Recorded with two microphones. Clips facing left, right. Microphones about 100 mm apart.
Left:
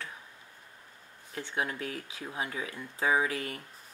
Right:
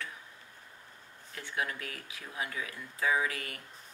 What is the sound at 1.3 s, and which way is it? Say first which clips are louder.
Speech: left 2 dB; 25° left (ahead or behind).